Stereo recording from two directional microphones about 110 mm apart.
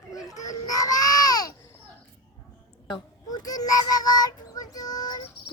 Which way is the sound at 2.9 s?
35° left (ahead or behind).